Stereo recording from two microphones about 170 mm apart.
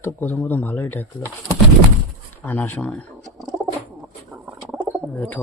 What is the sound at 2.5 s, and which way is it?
Speech, 10° left (ahead or behind).